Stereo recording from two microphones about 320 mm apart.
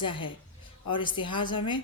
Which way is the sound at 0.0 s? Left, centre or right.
Centre.